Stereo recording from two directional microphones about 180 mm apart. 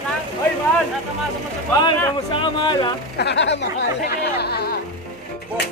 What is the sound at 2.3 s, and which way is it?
Speech, 25° left (ahead or behind).